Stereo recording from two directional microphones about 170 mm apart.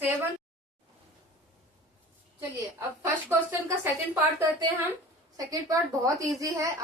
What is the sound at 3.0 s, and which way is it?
A woman's voice, 15° right (ahead or behind).